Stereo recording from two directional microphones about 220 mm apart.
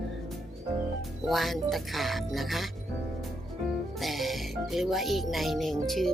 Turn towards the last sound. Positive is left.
turn(degrees=0)  # may be behind; listen again after turning